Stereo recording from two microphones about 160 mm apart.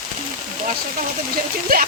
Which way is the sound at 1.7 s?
70° right (ahead or behind).